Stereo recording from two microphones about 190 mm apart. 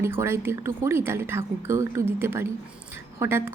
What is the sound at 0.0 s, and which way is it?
A woman's voice, 15° right (ahead or behind).